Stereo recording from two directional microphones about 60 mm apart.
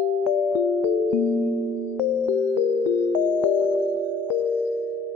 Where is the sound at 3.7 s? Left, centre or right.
Right.